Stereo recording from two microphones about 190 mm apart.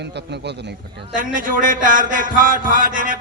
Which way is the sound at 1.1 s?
45° right (ahead or behind).